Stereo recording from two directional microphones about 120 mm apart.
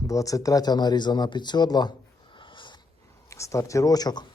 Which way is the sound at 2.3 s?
45° left (ahead or behind).